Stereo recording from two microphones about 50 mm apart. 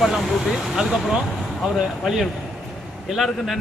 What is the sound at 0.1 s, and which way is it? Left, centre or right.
A man's voice, centre.